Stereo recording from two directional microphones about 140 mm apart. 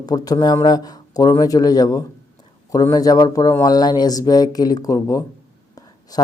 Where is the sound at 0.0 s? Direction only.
30° left (ahead or behind).